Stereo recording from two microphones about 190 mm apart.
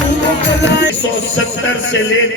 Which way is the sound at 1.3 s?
90° left.